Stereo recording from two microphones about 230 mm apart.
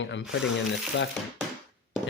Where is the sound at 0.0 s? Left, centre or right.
Left.